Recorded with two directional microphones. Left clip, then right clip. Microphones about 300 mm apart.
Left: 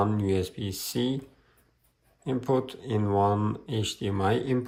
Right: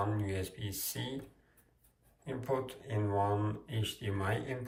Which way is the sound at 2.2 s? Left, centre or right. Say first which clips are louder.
Left 8 dB; centre.